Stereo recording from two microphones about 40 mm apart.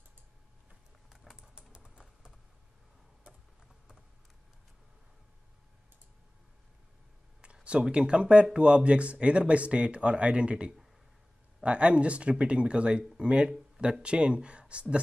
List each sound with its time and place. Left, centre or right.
1.1 s typing: centre
1.5 s typing: right
3.3 s tick-tock: right
7.9 s speech: right